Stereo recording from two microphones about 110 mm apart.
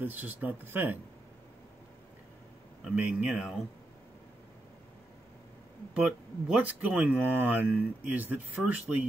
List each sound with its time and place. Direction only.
0.0 s speech: 15° right (ahead or behind)
2.8 s speech: 10° right (ahead or behind)
5.9 s speech: 10° right (ahead or behind)